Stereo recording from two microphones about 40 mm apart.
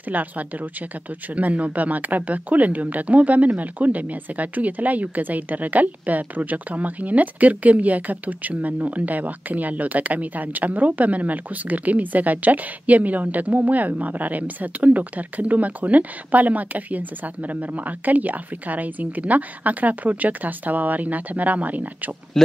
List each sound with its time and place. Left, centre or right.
0.1 s speech: right